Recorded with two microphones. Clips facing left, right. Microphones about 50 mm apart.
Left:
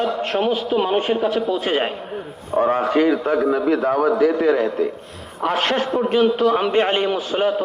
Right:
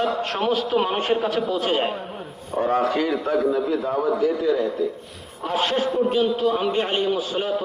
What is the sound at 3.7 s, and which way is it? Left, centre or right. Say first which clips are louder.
A man's voice: left 5 dB; left.